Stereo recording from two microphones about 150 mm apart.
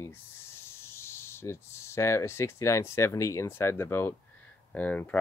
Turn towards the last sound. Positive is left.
turn(degrees=10)  # may be behind; listen again after turning